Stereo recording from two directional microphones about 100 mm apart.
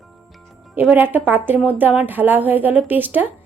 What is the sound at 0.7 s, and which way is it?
A woman's voice, 20° right (ahead or behind).